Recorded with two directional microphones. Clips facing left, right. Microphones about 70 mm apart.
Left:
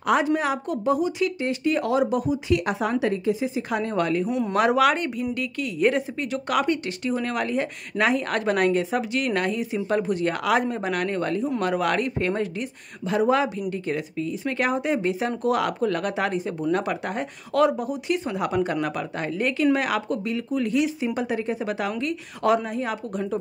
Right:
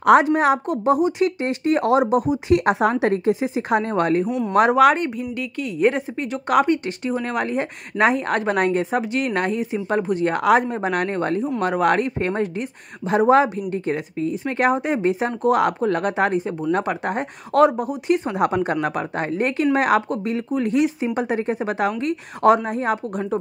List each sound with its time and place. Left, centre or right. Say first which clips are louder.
0.0 s a woman's voice: right 8 dB; right
0.4 s a woman's voice: right 7 dB; right
3.8 s speech: right 4 dB; right
4.3 s speech: right 2 dB; centre
4.6 s speech: right 5 dB; right
5.2 s speech: right 1 dB; centre
13.1 s speech: right 6 dB; right
13.6 s speech: right 3 dB; right